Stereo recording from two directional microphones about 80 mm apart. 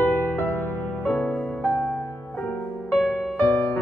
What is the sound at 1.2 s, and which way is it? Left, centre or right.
Music, centre.